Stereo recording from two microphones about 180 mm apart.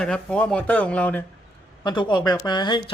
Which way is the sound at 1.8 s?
25° left (ahead or behind).